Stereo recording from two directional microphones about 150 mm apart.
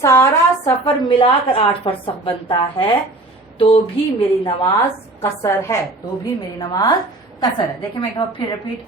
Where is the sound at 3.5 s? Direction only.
35° left (ahead or behind).